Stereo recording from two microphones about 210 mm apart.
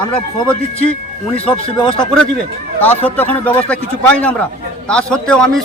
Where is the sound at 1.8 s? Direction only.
25° left (ahead or behind).